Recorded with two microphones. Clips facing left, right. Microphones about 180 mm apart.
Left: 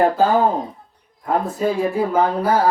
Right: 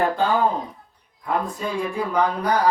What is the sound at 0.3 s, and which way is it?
Speech, 45° left (ahead or behind).